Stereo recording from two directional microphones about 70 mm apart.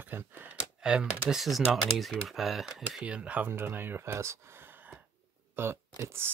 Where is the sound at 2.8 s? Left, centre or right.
Centre.